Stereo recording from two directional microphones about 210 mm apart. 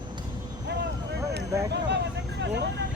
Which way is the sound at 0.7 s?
50° right (ahead or behind).